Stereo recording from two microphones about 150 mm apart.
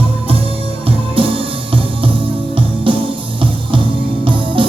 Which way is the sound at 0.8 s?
35° right (ahead or behind).